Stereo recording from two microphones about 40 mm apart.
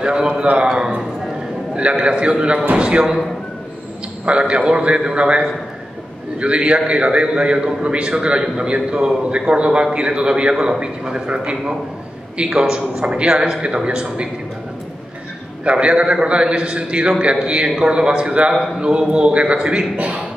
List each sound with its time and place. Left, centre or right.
0.0 s a man's voice: right
1.8 s a man's voice: right
4.3 s a man's voice: right
15.6 s a man's voice: right